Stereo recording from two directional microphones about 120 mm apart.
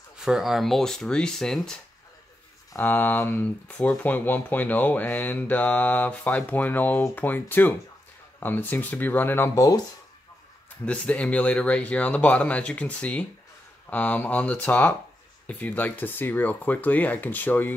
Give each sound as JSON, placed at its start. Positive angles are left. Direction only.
{"t": 0.2, "sound": "speech", "side_deg": -5}
{"t": 2.7, "sound": "speech", "side_deg": 15}
{"t": 10.9, "sound": "speech", "side_deg": 10}